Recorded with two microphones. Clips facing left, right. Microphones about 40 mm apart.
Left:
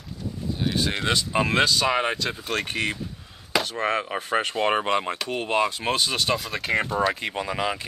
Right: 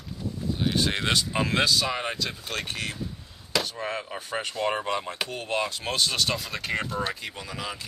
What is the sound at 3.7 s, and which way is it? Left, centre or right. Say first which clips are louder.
Speech: left 7 dB; left.